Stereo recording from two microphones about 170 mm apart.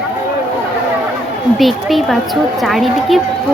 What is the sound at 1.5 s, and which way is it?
A woman's voice, centre (ahead or behind).